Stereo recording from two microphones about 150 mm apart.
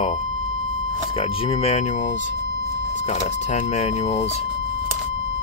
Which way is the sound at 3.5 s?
45° left (ahead or behind).